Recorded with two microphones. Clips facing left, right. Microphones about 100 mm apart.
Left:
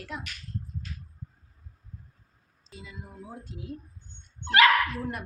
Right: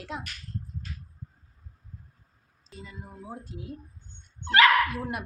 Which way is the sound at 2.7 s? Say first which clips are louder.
Right 1 dB; 5° left (ahead or behind).